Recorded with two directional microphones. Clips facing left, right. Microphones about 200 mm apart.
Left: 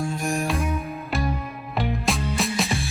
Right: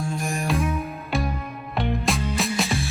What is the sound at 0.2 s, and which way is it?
Music, centre (ahead or behind).